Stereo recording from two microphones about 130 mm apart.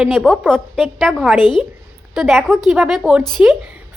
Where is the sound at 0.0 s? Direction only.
Centre (ahead or behind).